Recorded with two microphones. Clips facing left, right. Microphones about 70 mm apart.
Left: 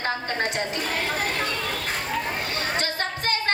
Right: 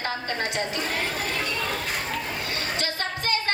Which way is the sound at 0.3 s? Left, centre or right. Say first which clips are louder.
Left 2 dB; left.